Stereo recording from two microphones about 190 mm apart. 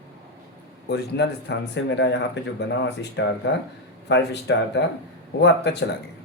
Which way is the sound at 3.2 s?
70° left (ahead or behind).